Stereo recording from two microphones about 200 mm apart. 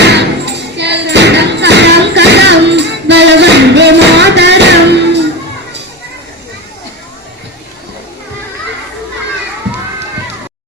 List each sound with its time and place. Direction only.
0.0 s music: 60° right (ahead or behind)